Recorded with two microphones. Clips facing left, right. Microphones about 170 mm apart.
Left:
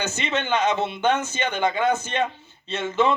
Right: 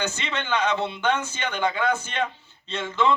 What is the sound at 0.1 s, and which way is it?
Speech, 15° left (ahead or behind).